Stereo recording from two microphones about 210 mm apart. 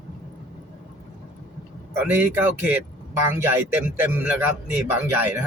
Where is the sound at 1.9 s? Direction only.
10° right (ahead or behind).